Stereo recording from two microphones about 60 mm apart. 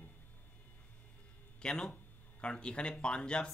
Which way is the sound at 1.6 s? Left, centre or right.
Centre.